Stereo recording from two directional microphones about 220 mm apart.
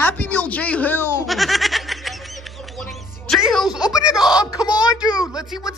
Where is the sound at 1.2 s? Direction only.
Centre (ahead or behind).